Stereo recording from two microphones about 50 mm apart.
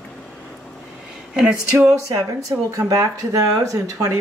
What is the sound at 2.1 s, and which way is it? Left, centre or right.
Speech, right.